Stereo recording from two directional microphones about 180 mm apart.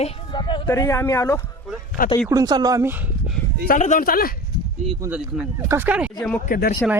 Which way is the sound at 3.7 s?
45° left (ahead or behind).